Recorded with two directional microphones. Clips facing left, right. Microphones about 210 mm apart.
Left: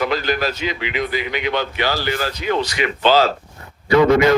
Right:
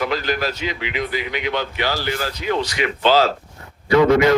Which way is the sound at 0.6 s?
75° left (ahead or behind).